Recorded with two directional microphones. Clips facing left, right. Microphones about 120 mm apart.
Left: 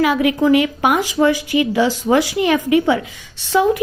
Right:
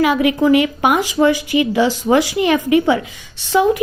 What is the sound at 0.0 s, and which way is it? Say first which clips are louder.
A woman's voice: right 1 dB; 20° right (ahead or behind).